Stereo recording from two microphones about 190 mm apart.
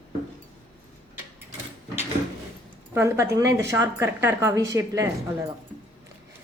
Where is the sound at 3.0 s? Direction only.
15° right (ahead or behind).